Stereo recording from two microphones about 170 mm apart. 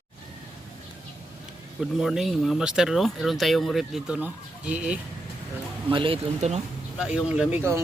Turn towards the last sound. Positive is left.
turn(degrees=-10)  # may be behind; listen again after turning